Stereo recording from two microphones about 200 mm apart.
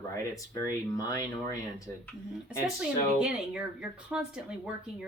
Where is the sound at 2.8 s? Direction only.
5° right (ahead or behind).